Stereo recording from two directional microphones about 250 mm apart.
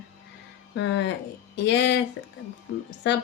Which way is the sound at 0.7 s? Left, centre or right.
Left.